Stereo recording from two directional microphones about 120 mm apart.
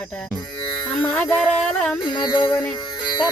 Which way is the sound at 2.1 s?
35° left (ahead or behind).